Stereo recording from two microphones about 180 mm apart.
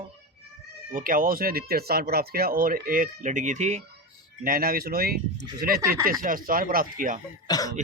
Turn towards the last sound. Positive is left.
turn(degrees=20)  # may be behind; listen again after turning